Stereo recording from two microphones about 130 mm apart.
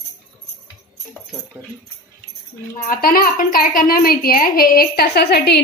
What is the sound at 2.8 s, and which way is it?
A woman's voice, 90° left.